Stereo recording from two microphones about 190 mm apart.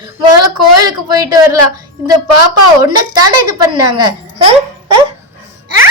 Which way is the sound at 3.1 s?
20° right (ahead or behind).